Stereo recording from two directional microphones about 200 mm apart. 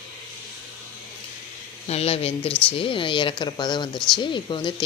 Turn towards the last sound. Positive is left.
turn(degrees=25)  # may be behind; listen again after turning